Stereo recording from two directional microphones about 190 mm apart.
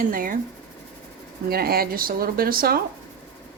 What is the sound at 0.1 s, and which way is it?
Speech, 45° right (ahead or behind).